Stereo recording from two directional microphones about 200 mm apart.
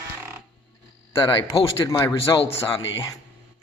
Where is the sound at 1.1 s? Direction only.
25° left (ahead or behind).